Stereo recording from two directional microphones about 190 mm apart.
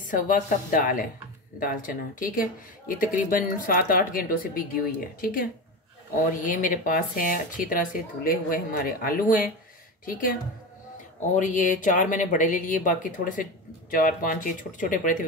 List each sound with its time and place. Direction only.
0.1 s speech: 45° left (ahead or behind)
11.1 s speech: 40° left (ahead or behind)